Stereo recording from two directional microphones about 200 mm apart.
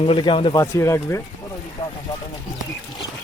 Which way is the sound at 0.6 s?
15° left (ahead or behind).